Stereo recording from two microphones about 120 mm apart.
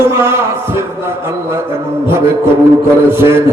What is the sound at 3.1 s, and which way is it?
Speech, 20° right (ahead or behind).